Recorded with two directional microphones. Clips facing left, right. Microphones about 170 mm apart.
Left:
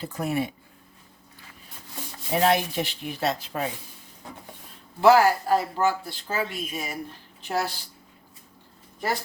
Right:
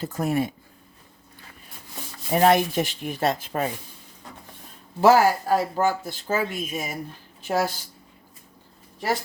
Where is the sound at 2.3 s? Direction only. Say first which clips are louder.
Right 4 dB; 50° right (ahead or behind).